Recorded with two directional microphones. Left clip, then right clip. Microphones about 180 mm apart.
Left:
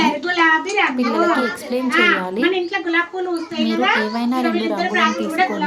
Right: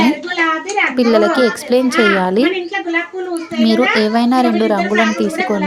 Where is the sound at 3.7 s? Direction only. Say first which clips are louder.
Right 4 dB; 35° right (ahead or behind).